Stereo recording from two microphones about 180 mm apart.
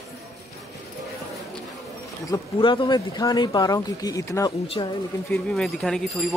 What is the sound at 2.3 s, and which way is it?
Speech, 25° left (ahead or behind).